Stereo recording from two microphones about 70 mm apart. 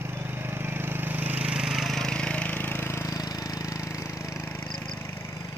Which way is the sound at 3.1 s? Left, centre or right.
Left.